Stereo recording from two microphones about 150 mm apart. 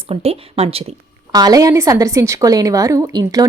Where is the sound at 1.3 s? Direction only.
25° right (ahead or behind).